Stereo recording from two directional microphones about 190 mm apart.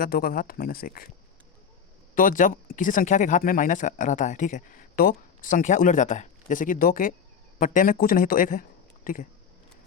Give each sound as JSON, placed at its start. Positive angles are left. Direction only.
{"t": 0.0, "sound": "speech", "side_deg": 50}
{"t": 2.1, "sound": "speech", "side_deg": 45}